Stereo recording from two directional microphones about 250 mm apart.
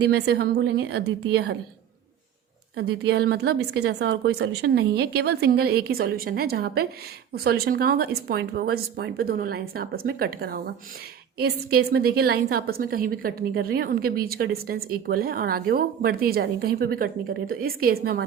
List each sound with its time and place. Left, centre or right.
0.0 s a woman's voice: right
2.7 s a woman's voice: right